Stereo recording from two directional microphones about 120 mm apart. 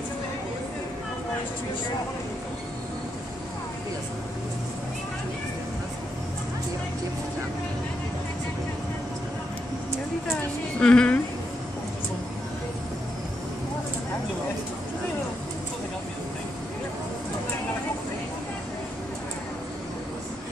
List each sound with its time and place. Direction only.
10.3 s a woman's voice: 10° left (ahead or behind)